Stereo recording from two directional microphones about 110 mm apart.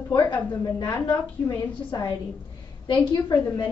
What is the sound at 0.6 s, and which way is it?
A woman's voice, 35° left (ahead or behind).